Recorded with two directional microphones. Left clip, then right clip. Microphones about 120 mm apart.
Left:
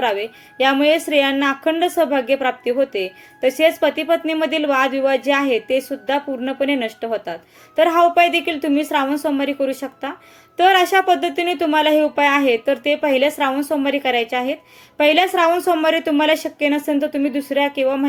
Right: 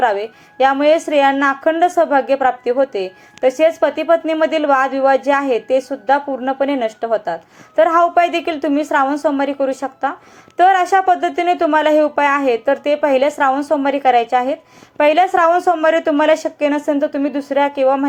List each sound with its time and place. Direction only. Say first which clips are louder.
0.0 s speech: right 4 dB; 15° left (ahead or behind)